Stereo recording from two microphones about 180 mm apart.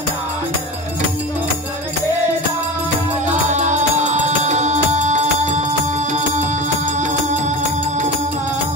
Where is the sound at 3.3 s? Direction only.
40° right (ahead or behind).